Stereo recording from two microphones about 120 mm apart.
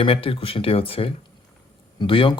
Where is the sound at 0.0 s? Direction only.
50° left (ahead or behind).